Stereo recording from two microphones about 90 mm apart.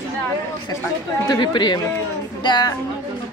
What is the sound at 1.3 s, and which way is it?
A woman's voice, 55° left (ahead or behind).